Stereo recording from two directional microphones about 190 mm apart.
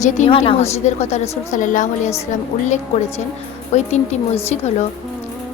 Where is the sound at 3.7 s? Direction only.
35° left (ahead or behind).